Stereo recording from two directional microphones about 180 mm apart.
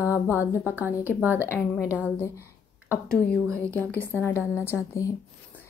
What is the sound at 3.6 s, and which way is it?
A woman's voice, 10° left (ahead or behind).